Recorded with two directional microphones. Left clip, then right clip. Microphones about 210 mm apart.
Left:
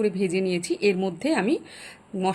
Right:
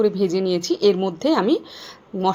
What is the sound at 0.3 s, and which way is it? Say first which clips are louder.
Speech: right 5 dB; 5° left (ahead or behind).